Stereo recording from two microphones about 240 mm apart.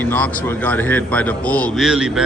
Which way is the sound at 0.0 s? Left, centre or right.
Centre.